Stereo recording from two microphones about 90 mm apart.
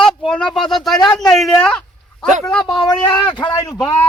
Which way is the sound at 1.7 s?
5° left (ahead or behind).